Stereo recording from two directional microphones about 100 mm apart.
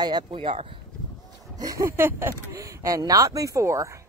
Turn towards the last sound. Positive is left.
turn(degrees=-30)  # may be behind; listen again after turning